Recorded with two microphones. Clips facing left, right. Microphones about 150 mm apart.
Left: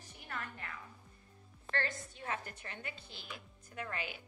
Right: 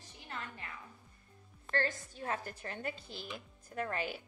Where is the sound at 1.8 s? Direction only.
35° right (ahead or behind).